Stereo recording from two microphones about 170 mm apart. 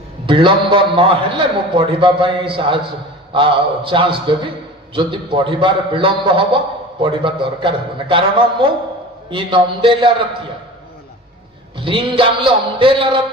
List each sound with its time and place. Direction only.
0.3 s a man's voice: 30° right (ahead or behind)
11.8 s a man's voice: 30° right (ahead or behind)